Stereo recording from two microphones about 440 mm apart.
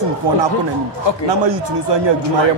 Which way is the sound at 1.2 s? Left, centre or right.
Right.